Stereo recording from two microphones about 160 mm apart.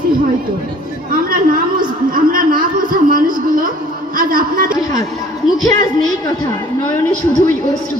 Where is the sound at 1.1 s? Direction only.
65° right (ahead or behind).